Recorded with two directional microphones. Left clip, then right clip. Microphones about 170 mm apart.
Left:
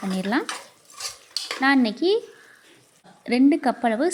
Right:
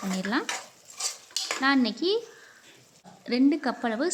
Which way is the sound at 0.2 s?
15° left (ahead or behind).